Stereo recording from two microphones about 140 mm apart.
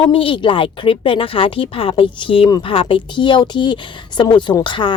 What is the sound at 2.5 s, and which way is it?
Speech, 30° left (ahead or behind).